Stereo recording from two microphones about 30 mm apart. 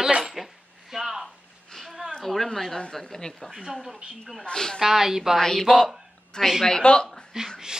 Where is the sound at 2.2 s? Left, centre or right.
Centre.